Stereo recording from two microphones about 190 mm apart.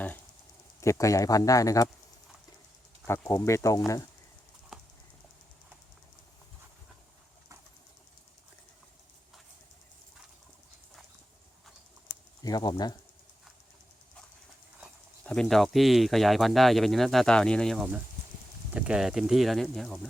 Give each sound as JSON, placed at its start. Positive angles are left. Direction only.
{"t": 0.8, "sound": "speech", "side_deg": 15}
{"t": 3.1, "sound": "speech", "side_deg": 15}
{"t": 4.7, "sound": "typing", "side_deg": 0}
{"t": 12.4, "sound": "speech", "side_deg": 20}
{"t": 15.2, "sound": "speech", "side_deg": 5}